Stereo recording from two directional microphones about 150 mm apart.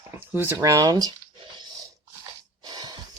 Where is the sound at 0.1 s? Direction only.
15° right (ahead or behind).